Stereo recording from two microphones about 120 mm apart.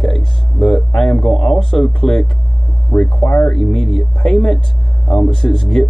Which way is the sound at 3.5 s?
5° left (ahead or behind).